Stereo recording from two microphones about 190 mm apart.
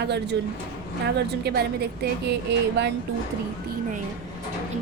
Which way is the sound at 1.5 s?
55° right (ahead or behind).